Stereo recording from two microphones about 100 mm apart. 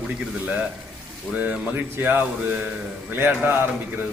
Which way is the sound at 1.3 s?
15° right (ahead or behind).